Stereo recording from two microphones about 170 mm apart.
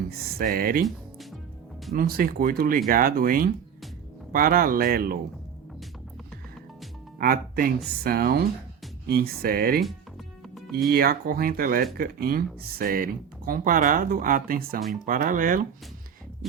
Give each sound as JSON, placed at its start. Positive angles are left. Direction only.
{"t": 0.1, "sound": "speech", "side_deg": -60}
{"t": 1.9, "sound": "speech", "side_deg": -60}
{"t": 7.2, "sound": "speech", "side_deg": -60}
{"t": 10.4, "sound": "music", "side_deg": 0}
{"t": 10.8, "sound": "speech", "side_deg": -65}